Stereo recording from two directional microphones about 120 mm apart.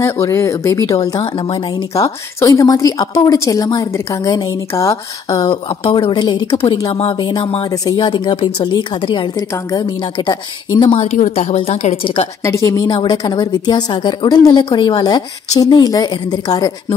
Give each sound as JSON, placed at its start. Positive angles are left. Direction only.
{"t": 0.0, "sound": "a woman's voice", "side_deg": 25}
{"t": 1.2, "sound": "speech", "side_deg": 45}
{"t": 2.0, "sound": "a woman's voice", "side_deg": 30}
{"t": 5.4, "sound": "speech", "side_deg": 45}
{"t": 7.2, "sound": "speech", "side_deg": 40}
{"t": 7.7, "sound": "a woman's voice", "side_deg": 35}
{"t": 10.8, "sound": "a woman's voice", "side_deg": 55}
{"t": 12.4, "sound": "a woman's voice", "side_deg": 25}